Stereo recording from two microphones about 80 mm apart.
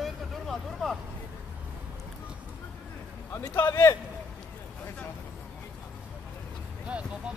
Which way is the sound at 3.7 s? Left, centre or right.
Left.